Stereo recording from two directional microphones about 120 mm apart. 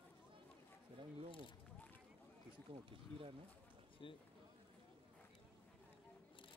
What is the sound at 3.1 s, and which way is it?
Speech, 50° right (ahead or behind).